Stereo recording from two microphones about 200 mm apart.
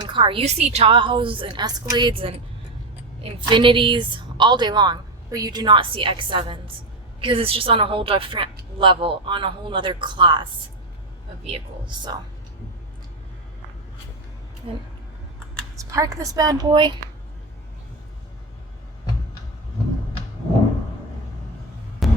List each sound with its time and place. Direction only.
0.0 s a woman's voice: 25° right (ahead or behind)
3.4 s a woman's voice: 25° right (ahead or behind)
11.4 s a woman's voice: 25° right (ahead or behind)
14.6 s a woman's voice: 25° right (ahead or behind)
22.0 s vehicle: centre (ahead or behind)